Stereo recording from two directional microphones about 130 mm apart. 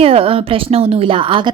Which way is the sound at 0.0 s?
45° right (ahead or behind).